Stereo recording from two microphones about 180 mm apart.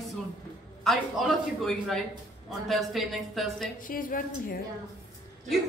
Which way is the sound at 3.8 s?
50° left (ahead or behind).